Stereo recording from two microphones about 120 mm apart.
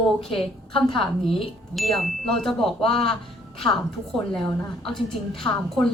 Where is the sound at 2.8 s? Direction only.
50° left (ahead or behind).